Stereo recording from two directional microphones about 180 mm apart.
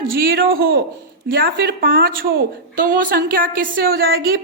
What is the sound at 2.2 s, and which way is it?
A woman's voice, 55° right (ahead or behind).